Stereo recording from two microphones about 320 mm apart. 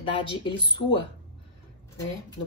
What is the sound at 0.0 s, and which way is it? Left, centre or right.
Speech, centre.